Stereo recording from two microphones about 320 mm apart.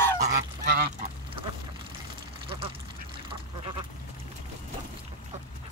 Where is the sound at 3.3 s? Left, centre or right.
Centre.